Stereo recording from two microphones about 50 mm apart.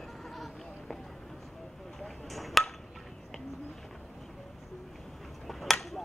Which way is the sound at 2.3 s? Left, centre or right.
Centre.